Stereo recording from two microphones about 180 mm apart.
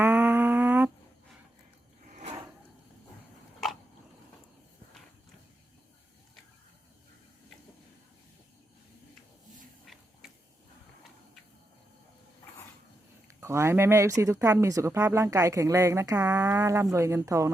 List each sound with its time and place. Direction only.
0.0 s humming: 10° right (ahead or behind)
2.0 s drawer open or close: 45° right (ahead or behind)
9.8 s a sound: centre (ahead or behind)
13.2 s speech: 15° right (ahead or behind)